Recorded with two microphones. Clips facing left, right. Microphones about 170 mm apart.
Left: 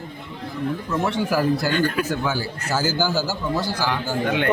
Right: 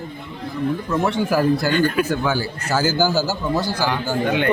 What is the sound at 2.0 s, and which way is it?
Speech, 65° right (ahead or behind).